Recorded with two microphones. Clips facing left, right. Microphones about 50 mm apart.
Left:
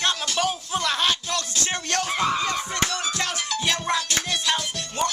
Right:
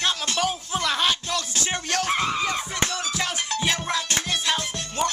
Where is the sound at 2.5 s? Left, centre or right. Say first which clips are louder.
Left 1 dB; centre.